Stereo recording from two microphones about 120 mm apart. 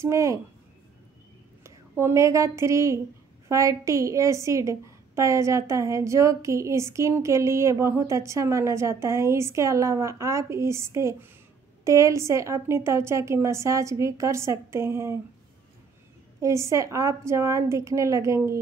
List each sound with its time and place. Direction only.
0.0 s a woman's voice: 25° right (ahead or behind)
1.6 s a woman's voice: 25° right (ahead or behind)
16.3 s a woman's voice: 25° right (ahead or behind)